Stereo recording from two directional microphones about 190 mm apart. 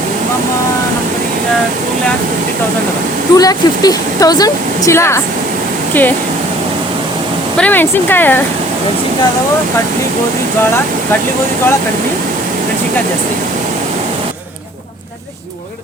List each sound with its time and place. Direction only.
3.3 s speech: 20° left (ahead or behind)
7.5 s speech: 10° left (ahead or behind)